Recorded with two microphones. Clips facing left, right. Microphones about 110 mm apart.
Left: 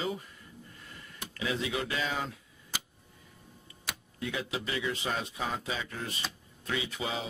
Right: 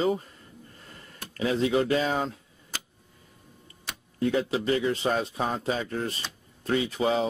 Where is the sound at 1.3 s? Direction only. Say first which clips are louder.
Right 9 dB; 40° right (ahead or behind).